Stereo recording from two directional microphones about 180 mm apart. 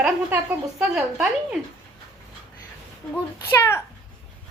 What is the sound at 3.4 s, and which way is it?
Speech, 15° left (ahead or behind).